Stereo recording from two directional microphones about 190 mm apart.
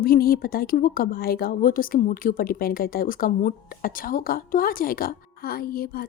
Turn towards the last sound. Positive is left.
turn(degrees=50)  # may be behind; listen again after turning